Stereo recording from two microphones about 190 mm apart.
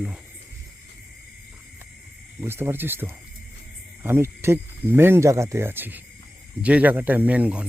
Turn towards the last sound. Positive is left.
turn(degrees=-5)  # may be behind; listen again after turning